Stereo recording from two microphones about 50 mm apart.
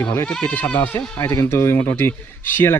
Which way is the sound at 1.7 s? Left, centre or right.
Left.